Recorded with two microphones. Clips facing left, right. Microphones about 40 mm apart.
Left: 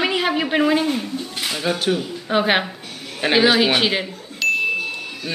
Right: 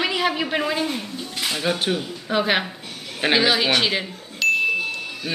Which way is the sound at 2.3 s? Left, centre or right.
Centre.